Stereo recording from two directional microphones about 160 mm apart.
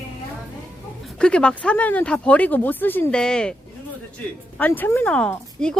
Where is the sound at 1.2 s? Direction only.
5° left (ahead or behind).